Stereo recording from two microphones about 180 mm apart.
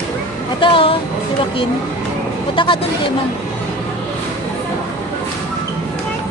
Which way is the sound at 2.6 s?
30° left (ahead or behind).